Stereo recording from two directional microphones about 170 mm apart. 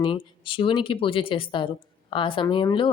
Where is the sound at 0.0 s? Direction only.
30° left (ahead or behind).